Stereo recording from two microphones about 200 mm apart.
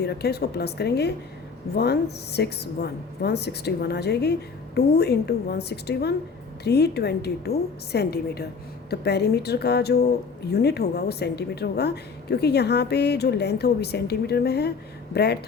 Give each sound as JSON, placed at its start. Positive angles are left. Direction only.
{"t": 0.0, "sound": "a woman's voice", "side_deg": 55}